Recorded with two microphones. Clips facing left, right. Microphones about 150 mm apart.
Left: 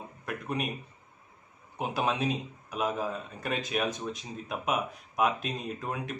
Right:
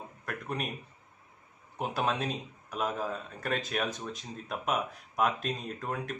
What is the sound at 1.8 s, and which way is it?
A man's voice, 5° left (ahead or behind).